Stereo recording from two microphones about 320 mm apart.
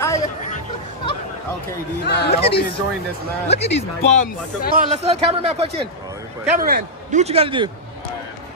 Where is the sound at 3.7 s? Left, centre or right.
Left.